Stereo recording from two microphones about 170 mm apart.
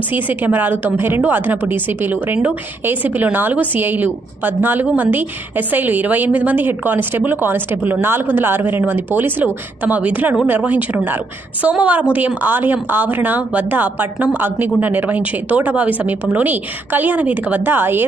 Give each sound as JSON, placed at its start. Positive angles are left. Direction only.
{"t": 0.1, "sound": "a woman's voice", "side_deg": -10}